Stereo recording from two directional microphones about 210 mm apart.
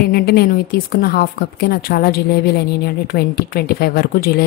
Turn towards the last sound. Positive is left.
turn(degrees=45)  # may be behind; listen again after turning